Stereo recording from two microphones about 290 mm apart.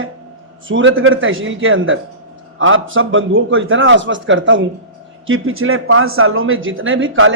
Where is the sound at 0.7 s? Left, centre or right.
Right.